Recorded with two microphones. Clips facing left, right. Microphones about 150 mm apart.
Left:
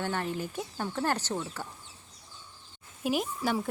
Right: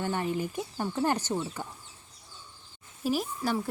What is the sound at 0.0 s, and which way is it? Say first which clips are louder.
Speech: right 2 dB; 10° right (ahead or behind).